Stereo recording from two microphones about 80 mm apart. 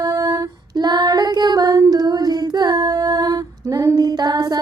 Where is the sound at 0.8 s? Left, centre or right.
Right.